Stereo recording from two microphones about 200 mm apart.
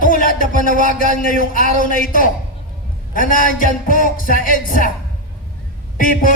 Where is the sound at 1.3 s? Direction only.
45° left (ahead or behind).